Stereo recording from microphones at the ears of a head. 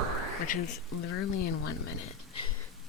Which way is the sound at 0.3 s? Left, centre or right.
Left.